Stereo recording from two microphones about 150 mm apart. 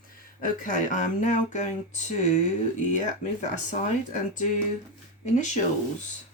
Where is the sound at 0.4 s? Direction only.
60° left (ahead or behind).